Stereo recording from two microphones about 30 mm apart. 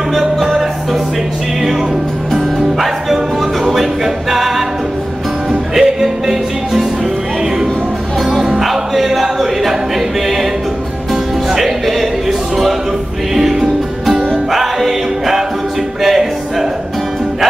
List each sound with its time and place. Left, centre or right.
0.1 s music: centre
3.6 s a capella: centre
5.8 s music: centre
9.0 s music: centre
11.5 s a sound: centre
13.3 s music: centre
14.6 s music: centre